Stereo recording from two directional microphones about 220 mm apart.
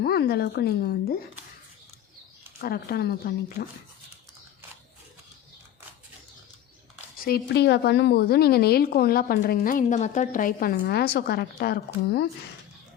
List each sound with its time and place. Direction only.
0.0 s a woman's voice: 45° left (ahead or behind)
2.6 s a woman's voice: 45° left (ahead or behind)
7.3 s a woman's voice: 45° left (ahead or behind)